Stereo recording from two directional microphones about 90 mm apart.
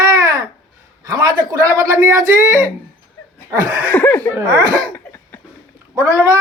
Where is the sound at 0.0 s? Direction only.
40° right (ahead or behind).